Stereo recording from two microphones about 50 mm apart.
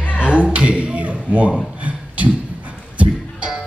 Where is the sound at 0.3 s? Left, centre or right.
Right.